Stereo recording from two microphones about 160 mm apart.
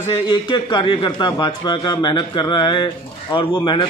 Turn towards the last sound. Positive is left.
turn(degrees=30)  # may be behind; listen again after turning